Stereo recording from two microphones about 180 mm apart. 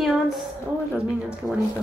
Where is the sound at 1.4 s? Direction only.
10° right (ahead or behind).